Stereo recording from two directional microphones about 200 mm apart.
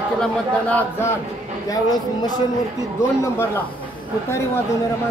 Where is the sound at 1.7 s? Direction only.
20° left (ahead or behind).